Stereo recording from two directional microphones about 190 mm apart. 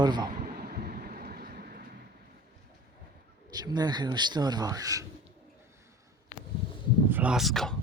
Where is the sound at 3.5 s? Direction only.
20° right (ahead or behind).